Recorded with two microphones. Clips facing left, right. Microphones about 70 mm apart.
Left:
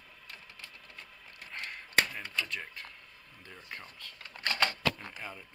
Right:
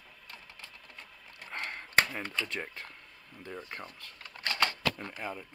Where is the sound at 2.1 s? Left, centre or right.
Right.